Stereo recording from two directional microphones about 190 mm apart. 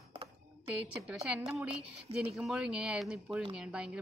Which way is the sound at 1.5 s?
Centre (ahead or behind).